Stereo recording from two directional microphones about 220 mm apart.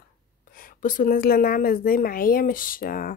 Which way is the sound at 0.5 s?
40° left (ahead or behind).